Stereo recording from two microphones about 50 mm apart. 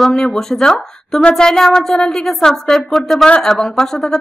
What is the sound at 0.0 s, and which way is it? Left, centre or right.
Speech, centre.